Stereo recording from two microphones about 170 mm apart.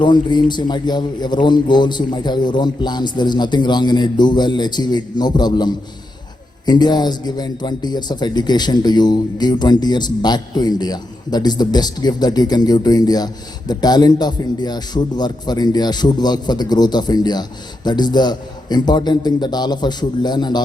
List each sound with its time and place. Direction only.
0.0 s a man's voice: 25° left (ahead or behind)